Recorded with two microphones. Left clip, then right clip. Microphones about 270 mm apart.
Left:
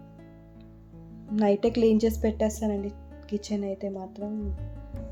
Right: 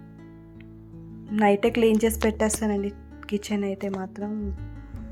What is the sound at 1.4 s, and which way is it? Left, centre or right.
Speech, centre.